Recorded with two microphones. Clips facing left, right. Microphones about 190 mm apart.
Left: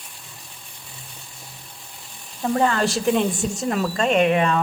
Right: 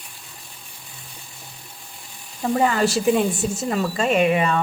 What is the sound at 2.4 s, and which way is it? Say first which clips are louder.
Speech: right 1 dB; 5° right (ahead or behind).